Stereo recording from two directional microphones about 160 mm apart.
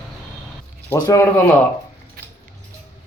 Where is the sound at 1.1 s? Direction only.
15° left (ahead or behind).